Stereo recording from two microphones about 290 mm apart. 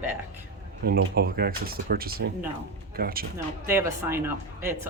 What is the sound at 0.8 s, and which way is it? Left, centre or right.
Speech, right.